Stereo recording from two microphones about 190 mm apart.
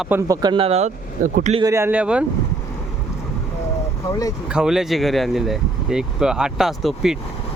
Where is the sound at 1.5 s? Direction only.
20° right (ahead or behind).